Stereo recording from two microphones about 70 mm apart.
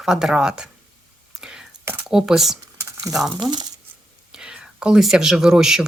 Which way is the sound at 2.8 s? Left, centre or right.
Right.